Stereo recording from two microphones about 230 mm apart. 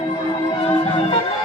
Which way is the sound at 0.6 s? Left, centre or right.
Left.